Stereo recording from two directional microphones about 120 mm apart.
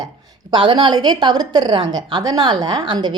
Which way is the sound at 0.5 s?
40° right (ahead or behind).